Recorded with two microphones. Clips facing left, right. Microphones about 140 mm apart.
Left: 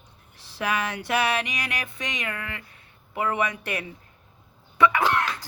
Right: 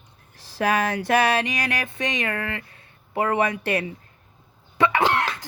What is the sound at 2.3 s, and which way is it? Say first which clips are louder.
Speech: right 6 dB; 70° right (ahead or behind).